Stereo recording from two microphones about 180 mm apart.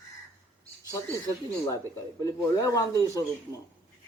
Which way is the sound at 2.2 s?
20° left (ahead or behind).